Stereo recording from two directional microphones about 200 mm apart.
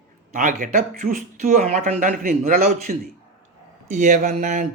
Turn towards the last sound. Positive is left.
turn(degrees=-40)  # may be behind; listen again after turning